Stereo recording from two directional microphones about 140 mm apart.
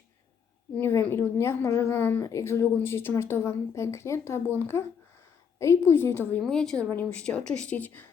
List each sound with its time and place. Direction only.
0.8 s a woman's voice: 15° left (ahead or behind)
6.4 s a woman's voice: 5° left (ahead or behind)